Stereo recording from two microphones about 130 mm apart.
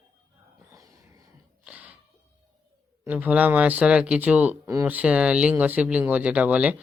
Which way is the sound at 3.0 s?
10° right (ahead or behind).